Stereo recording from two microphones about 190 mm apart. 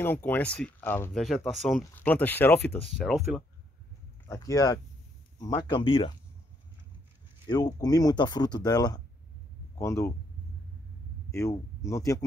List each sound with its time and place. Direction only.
0.0 s speech: 10° left (ahead or behind)
1.2 s speech: centre (ahead or behind)
4.3 s speech: 15° left (ahead or behind)
7.4 s speech: 20° left (ahead or behind)
11.3 s speech: 15° left (ahead or behind)